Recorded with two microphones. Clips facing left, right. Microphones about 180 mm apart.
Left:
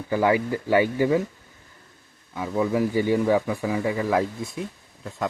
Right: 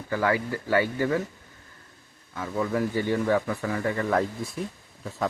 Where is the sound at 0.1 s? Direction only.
15° left (ahead or behind).